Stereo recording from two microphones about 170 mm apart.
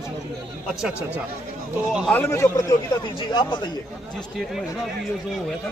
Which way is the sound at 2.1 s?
15° left (ahead or behind).